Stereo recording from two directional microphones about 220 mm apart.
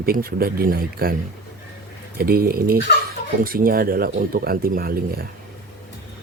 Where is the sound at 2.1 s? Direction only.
45° right (ahead or behind).